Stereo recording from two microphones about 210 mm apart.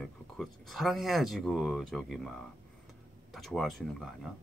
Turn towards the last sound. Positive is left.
turn(degrees=0)  # may be behind; listen again after turning